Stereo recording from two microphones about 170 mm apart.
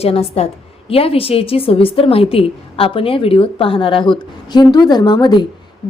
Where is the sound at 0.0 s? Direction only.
35° left (ahead or behind).